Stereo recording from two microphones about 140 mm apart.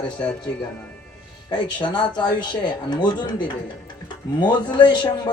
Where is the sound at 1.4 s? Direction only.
35° left (ahead or behind).